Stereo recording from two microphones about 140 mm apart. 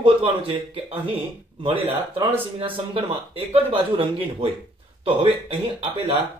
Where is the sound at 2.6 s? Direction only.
40° right (ahead or behind).